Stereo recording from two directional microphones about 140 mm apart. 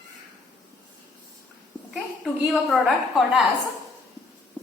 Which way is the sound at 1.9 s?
5° right (ahead or behind).